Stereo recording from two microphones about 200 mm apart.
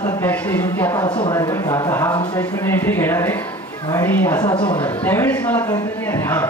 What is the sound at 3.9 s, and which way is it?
Speech, 10° left (ahead or behind).